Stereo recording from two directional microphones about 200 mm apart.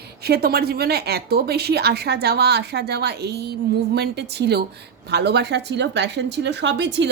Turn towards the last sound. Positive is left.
turn(degrees=-60)  # may be behind; listen again after turning